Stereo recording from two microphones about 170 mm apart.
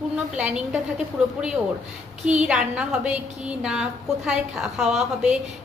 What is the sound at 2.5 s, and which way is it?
A woman's voice, 5° right (ahead or behind).